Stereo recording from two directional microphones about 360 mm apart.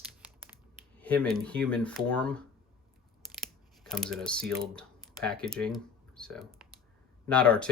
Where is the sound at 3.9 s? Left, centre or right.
Centre.